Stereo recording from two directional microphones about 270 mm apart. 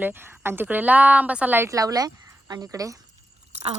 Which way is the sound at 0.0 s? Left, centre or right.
Centre.